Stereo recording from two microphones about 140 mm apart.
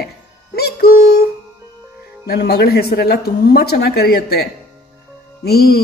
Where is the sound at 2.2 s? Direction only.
90° left.